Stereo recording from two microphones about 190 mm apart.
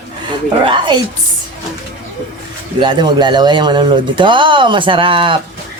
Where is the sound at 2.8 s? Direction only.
25° right (ahead or behind).